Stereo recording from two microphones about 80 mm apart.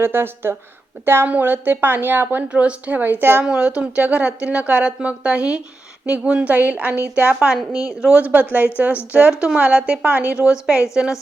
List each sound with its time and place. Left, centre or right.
0.0 s a woman's voice: right
3.4 s a woman's voice: centre
7.4 s speech: centre
9.6 s speech: centre